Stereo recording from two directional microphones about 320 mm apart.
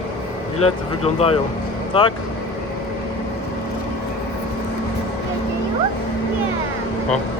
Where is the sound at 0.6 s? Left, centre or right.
Centre.